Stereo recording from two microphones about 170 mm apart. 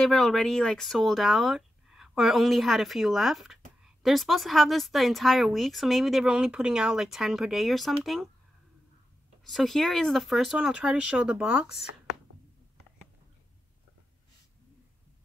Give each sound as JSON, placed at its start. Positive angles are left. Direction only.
{"t": 0.0, "sound": "speech", "side_deg": 5}
{"t": 9.4, "sound": "speech", "side_deg": 0}